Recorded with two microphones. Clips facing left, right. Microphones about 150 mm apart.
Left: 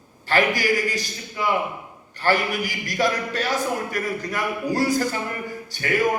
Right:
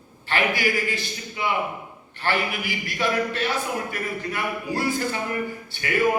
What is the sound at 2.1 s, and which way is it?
A man's voice, 40° left (ahead or behind).